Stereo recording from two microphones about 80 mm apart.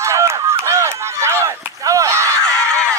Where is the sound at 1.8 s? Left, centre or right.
Right.